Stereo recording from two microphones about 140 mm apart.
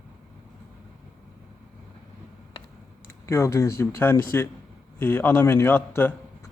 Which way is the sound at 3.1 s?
20° left (ahead or behind).